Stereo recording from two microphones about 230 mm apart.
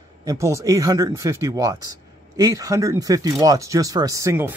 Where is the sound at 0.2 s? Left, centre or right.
Centre.